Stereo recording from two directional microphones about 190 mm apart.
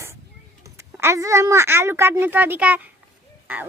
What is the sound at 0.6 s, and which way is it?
A woman's voice, 15° right (ahead or behind).